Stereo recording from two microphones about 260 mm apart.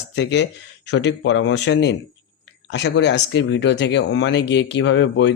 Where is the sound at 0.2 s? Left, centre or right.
Left.